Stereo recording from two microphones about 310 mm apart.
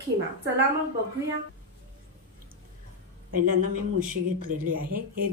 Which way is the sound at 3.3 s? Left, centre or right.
Right.